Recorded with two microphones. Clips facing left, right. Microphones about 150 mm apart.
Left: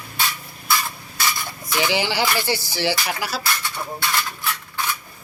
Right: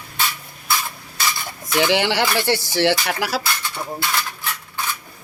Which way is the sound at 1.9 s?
65° right (ahead or behind).